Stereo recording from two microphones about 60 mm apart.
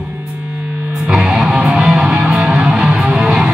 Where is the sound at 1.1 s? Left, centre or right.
Centre.